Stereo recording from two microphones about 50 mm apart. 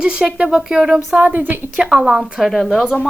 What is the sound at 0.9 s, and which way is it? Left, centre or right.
Speech, right.